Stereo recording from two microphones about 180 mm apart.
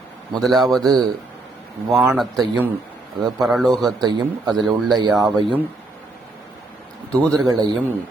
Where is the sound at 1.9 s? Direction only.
Centre (ahead or behind).